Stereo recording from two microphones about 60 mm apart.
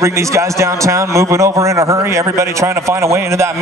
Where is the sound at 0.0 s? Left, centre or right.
Right.